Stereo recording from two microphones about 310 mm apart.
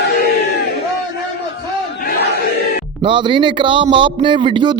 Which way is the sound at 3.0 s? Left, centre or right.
Centre.